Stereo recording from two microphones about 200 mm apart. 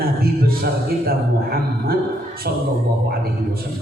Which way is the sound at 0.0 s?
50° right (ahead or behind).